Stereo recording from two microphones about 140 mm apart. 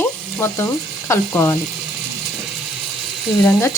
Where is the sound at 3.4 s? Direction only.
25° left (ahead or behind).